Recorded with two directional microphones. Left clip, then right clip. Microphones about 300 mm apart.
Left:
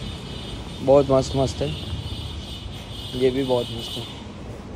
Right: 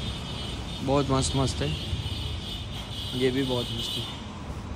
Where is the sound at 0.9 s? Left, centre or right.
Centre.